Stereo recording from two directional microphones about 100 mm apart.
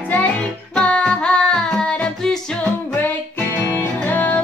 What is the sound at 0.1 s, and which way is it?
Music, 15° left (ahead or behind).